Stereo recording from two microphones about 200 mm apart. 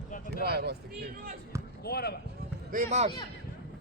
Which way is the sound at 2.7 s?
35° right (ahead or behind).